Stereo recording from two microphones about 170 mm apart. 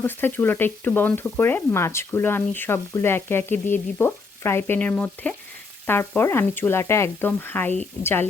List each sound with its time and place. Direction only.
0.0 s speech: 10° left (ahead or behind)